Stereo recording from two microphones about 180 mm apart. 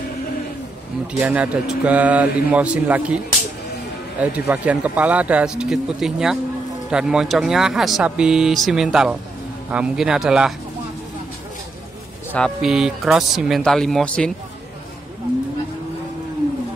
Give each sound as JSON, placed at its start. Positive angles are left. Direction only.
{"t": 1.2, "sound": "speech", "side_deg": -5}
{"t": 4.2, "sound": "speech", "side_deg": -10}
{"t": 12.3, "sound": "speech", "side_deg": 5}